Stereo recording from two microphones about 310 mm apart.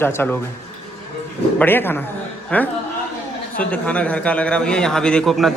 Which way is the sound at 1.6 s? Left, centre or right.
Centre.